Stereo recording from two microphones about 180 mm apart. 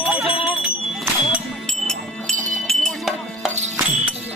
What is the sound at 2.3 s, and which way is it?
Music, 45° right (ahead or behind).